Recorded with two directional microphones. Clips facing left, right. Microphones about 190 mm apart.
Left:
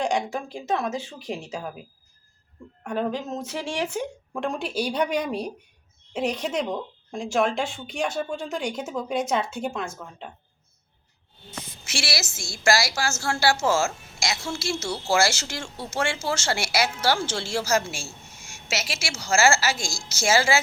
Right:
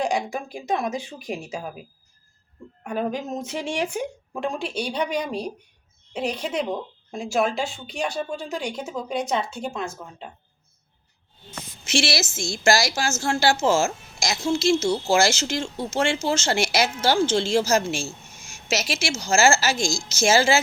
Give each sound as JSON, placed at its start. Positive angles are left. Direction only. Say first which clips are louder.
{"t": 0.0, "sound": "speech", "louder": "right 1 dB", "side_deg": -10}
{"t": 2.8, "sound": "speech", "louder": "right 1 dB", "side_deg": -10}
{"t": 4.4, "sound": "speech", "louder": "even", "side_deg": 0}
{"t": 11.9, "sound": "speech", "louder": "right 7 dB", "side_deg": -20}